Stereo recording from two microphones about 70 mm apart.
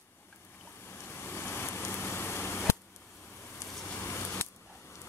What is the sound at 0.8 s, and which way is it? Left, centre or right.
Vehicle, left.